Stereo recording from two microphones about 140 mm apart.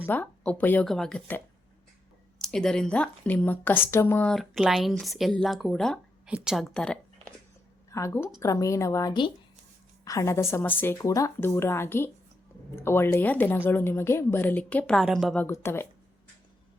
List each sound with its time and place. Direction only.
0.0 s speech: 15° left (ahead or behind)
2.4 s speech: 5° left (ahead or behind)
4.3 s speech: centre (ahead or behind)
7.9 s speech: 20° left (ahead or behind); by 15.4 s centre (ahead or behind)
15.4 s speech: 15° left (ahead or behind)